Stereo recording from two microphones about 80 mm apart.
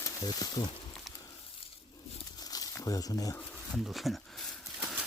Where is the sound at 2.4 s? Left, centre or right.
Left.